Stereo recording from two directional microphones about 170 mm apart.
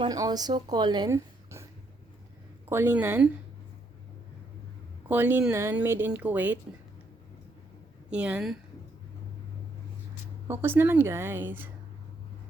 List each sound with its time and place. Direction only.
0.0 s speech: 25° right (ahead or behind)
2.6 s speech: 15° right (ahead or behind)
5.0 s speech: 10° right (ahead or behind)
8.1 s speech: 5° right (ahead or behind)
10.5 s speech: 15° right (ahead or behind)